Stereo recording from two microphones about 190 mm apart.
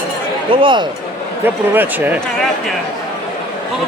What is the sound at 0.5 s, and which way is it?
Speech, 25° right (ahead or behind).